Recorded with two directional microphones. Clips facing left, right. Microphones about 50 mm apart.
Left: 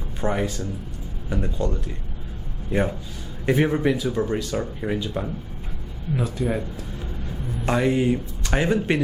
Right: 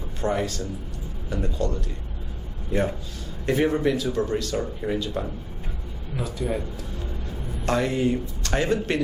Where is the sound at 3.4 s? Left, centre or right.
Centre.